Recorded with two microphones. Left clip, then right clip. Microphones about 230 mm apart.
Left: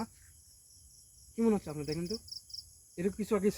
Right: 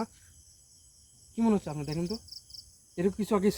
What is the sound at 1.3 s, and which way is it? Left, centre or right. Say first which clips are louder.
Speech: right 2 dB; right.